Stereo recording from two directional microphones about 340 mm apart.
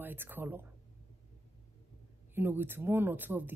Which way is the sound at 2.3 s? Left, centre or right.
Centre.